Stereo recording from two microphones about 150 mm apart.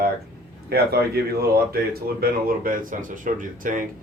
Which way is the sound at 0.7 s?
90° right.